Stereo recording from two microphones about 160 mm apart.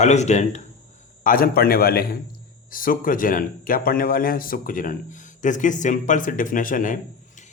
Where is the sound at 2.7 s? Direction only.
60° left (ahead or behind).